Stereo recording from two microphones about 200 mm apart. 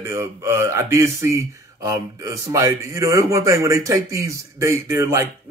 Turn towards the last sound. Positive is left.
turn(degrees=-15)  # may be behind; listen again after turning